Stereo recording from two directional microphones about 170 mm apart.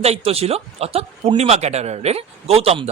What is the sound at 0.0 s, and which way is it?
Speech, 35° right (ahead or behind).